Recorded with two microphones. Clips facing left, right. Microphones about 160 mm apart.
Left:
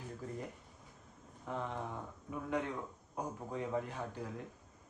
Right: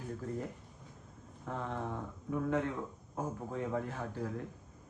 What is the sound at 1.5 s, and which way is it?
Speech, 15° left (ahead or behind).